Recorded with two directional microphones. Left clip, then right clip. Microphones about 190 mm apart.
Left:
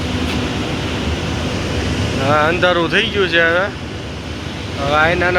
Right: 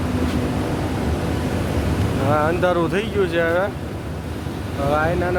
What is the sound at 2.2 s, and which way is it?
Speech, 5° right (ahead or behind).